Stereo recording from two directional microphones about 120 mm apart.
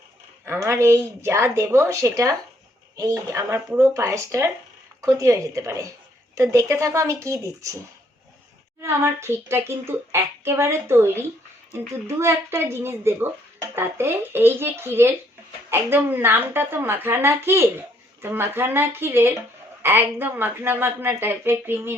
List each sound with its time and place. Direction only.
0.4 s a woman's voice: 25° right (ahead or behind)
8.8 s a woman's voice: 20° right (ahead or behind)